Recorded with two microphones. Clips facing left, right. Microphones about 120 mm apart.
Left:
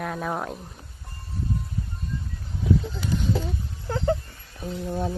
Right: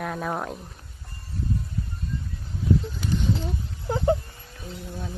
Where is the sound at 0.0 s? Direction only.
Centre (ahead or behind).